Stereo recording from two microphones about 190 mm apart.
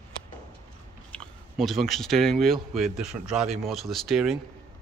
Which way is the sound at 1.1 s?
Centre (ahead or behind).